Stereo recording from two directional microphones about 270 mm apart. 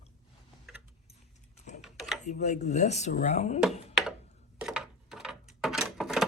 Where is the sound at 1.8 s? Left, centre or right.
Centre.